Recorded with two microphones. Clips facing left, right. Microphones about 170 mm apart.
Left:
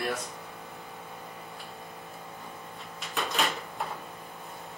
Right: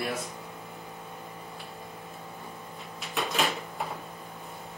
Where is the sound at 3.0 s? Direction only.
Centre (ahead or behind).